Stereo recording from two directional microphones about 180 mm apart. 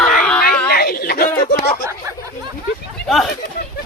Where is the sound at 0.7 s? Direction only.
60° left (ahead or behind).